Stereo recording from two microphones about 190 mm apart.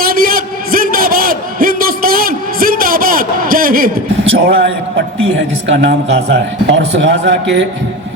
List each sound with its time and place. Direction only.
0.0 s a sound: 50° right (ahead or behind)
4.4 s a man's voice: 55° right (ahead or behind)
5.6 s speech: 70° right (ahead or behind)